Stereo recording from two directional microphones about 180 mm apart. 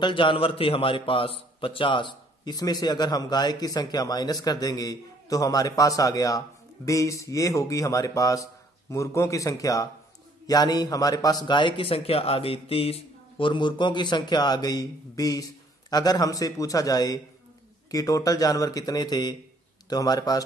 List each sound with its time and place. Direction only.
0.0 s a man's voice: 25° left (ahead or behind)